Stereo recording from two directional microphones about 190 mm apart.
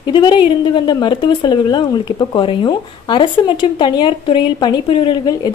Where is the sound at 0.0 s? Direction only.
25° left (ahead or behind).